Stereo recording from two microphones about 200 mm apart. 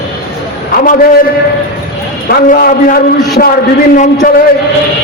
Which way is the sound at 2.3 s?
50° left (ahead or behind).